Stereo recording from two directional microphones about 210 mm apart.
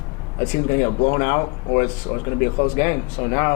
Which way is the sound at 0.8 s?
25° left (ahead or behind).